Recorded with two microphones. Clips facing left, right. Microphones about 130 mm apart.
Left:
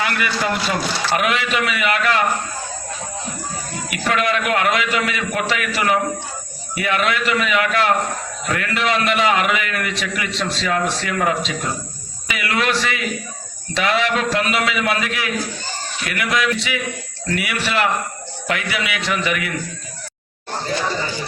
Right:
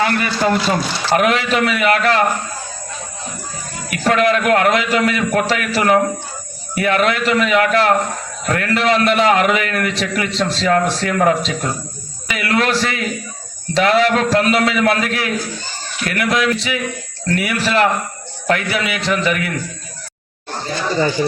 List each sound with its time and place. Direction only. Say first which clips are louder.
0.0 s a man's voice: right 5 dB; 35° right (ahead or behind)
3.8 s a man's voice: right 5 dB; 40° right (ahead or behind)